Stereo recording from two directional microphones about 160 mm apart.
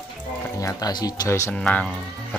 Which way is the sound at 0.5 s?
20° left (ahead or behind).